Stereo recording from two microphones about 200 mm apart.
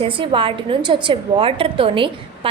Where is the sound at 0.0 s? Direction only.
25° right (ahead or behind).